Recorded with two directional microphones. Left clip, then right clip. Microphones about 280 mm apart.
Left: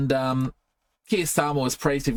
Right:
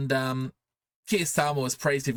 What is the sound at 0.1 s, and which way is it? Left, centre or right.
Speech, right.